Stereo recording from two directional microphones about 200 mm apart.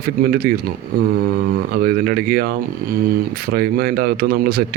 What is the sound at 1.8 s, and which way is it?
A man's voice, 50° right (ahead or behind).